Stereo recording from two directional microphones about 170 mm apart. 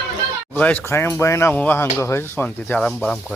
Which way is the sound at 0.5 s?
10° left (ahead or behind).